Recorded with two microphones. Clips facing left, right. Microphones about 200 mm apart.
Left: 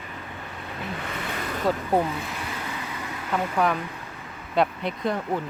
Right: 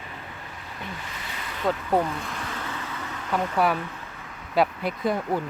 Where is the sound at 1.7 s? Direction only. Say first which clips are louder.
Even; 5° left (ahead or behind).